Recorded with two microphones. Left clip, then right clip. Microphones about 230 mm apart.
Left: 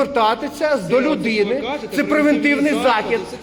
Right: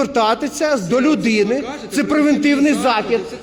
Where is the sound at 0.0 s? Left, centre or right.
Right.